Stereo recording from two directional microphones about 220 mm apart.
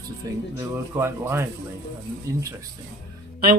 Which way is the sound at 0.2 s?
15° right (ahead or behind).